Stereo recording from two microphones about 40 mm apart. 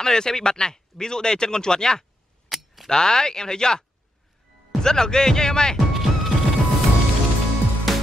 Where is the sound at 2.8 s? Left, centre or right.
Centre.